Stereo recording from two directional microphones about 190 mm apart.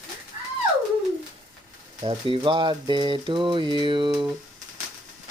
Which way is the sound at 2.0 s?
25° right (ahead or behind).